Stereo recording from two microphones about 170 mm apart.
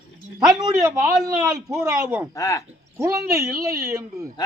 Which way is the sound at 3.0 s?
15° right (ahead or behind).